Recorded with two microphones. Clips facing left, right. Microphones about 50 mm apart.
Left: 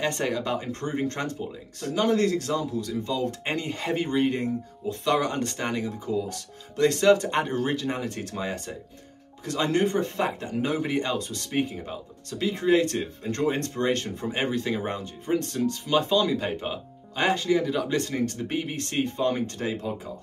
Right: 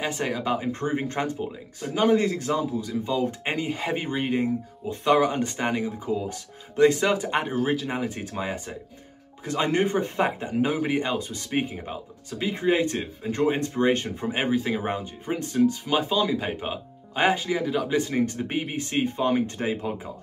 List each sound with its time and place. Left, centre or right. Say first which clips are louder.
0.0 s speech: even; centre